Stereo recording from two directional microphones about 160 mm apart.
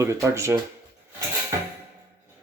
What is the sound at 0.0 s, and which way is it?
Speech, 20° right (ahead or behind).